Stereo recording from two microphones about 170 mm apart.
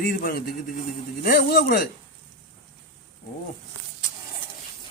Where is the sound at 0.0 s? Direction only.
60° left (ahead or behind).